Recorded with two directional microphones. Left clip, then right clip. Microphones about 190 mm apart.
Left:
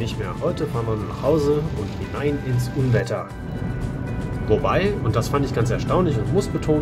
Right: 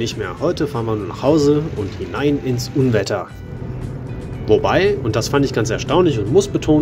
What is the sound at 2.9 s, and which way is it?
Speech, 35° right (ahead or behind).